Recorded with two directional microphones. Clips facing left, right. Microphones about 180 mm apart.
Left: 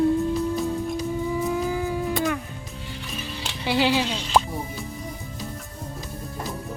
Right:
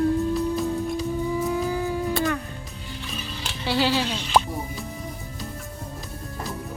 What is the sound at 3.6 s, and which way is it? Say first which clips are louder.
Speech: left 1 dB; 15° left (ahead or behind).